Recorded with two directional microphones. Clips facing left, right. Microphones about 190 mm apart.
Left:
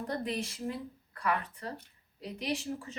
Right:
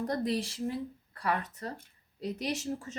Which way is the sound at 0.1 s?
35° right (ahead or behind).